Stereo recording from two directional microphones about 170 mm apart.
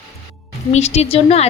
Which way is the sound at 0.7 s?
40° left (ahead or behind).